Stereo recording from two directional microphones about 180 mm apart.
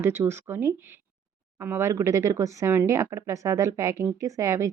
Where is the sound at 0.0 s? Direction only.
15° right (ahead or behind).